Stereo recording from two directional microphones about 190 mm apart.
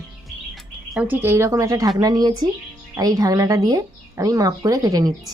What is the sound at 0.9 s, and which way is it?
A woman's voice, 10° right (ahead or behind).